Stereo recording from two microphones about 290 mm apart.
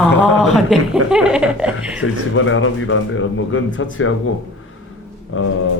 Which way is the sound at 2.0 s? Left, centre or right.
Left.